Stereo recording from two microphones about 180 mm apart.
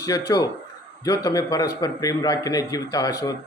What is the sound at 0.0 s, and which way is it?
A man's voice, 20° left (ahead or behind).